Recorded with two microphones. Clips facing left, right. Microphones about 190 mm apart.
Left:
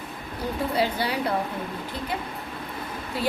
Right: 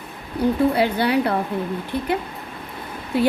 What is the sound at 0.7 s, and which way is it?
Speech, 60° right (ahead or behind).